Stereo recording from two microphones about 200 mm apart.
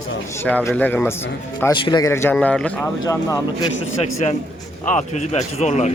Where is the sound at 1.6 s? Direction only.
20° left (ahead or behind); by 2.9 s 5° left (ahead or behind).